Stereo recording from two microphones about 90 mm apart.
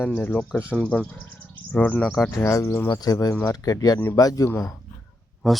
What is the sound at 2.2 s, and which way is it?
Speech, 30° left (ahead or behind).